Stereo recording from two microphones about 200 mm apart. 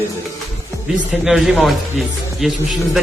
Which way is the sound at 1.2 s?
Centre (ahead or behind).